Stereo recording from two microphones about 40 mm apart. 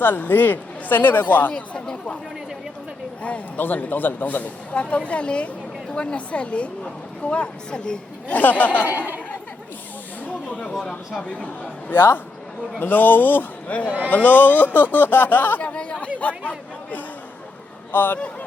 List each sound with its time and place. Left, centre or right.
0.0 s speech: left
1.5 s speech: left
3.6 s speech: left
4.7 s a woman's voice: left
8.3 s speech: left
8.9 s speech: right
10.2 s snake: left
11.3 s speech: left
11.9 s a man's voice: left
12.8 s speech: left
13.7 s speech: left
14.1 s speech: left
15.6 s chatter: left
17.9 s speech: left